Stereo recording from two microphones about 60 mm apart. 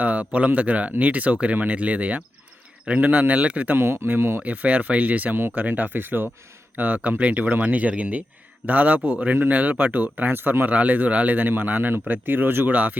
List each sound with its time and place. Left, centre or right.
0.0 s speech: right
3.8 s speech: right
4.4 s speech: right
10.7 s speech: right